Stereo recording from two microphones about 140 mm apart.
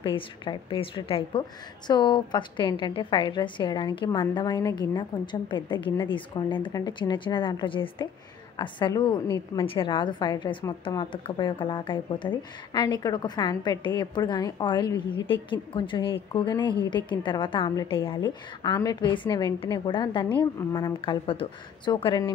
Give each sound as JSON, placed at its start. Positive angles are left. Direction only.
{"t": 0.0, "sound": "speech", "side_deg": 35}